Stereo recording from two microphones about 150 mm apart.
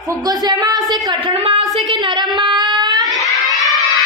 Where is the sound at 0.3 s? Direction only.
25° right (ahead or behind).